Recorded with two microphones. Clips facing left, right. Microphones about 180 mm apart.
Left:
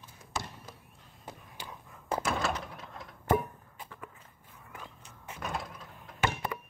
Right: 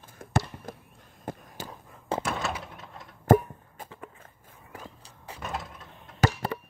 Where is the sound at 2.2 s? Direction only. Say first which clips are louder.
Even; centre (ahead or behind).